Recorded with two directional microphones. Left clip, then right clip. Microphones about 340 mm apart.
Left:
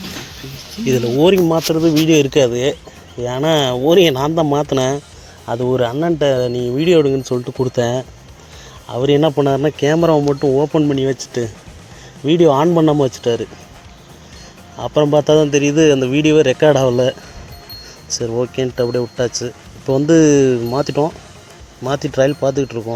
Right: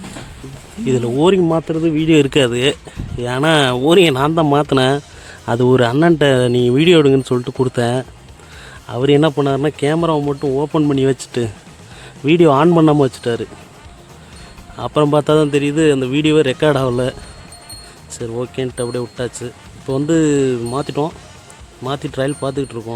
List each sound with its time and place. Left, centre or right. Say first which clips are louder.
0.9 s speech: left 1 dB; centre
5.5 s speech: right 3 dB; right; by 13.5 s centre
14.8 s speech: left 1 dB; centre
18.2 s speech: left 3 dB; centre